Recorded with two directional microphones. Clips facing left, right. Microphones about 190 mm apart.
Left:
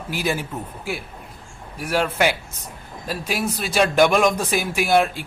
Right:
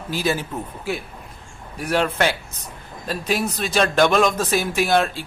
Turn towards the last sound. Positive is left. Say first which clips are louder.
# left 1 dB
turn(degrees=10)  # may be behind; listen again after turning